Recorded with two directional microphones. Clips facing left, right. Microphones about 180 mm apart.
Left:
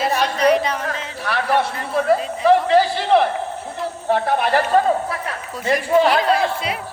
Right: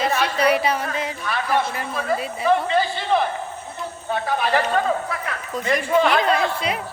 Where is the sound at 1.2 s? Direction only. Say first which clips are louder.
Left 4 dB; 75° left (ahead or behind).